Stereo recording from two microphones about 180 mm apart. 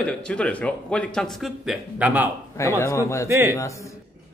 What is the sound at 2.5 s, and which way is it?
Speech, 15° left (ahead or behind).